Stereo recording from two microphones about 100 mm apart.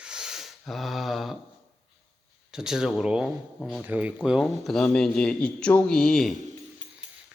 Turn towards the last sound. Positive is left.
turn(degrees=5)  # may be behind; listen again after turning